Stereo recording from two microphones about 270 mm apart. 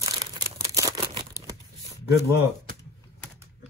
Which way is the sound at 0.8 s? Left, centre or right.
Centre.